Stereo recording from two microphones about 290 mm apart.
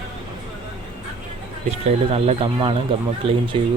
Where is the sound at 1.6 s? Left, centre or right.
Right.